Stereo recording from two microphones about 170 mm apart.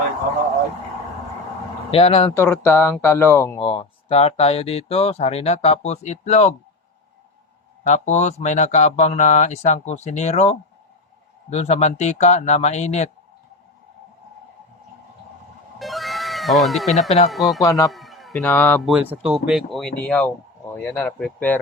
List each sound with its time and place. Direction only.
1.9 s speech: 35° left (ahead or behind)
2.3 s speech: 15° left (ahead or behind)
3.6 s speech: 35° left (ahead or behind)
7.9 s speech: 45° left (ahead or behind)
15.8 s music: centre (ahead or behind)
17.2 s speech: centre (ahead or behind)
17.6 s a man's voice: 20° left (ahead or behind)
17.9 s a sound: centre (ahead or behind)
18.4 s speech: 10° left (ahead or behind)
18.9 s speech: 5° right (ahead or behind)